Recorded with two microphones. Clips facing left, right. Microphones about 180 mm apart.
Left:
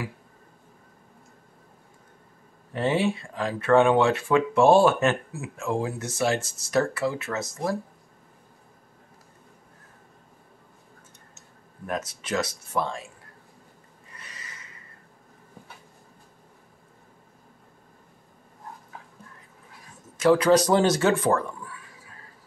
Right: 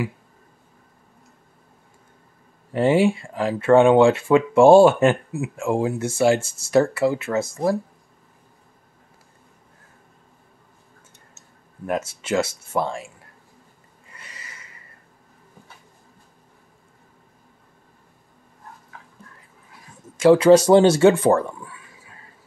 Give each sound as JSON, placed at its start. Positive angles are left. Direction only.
{"t": 2.7, "sound": "speech", "side_deg": -25}
{"t": 11.8, "sound": "speech", "side_deg": -25}
{"t": 20.2, "sound": "speech", "side_deg": -25}